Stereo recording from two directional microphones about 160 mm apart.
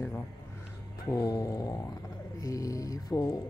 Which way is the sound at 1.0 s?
20° left (ahead or behind).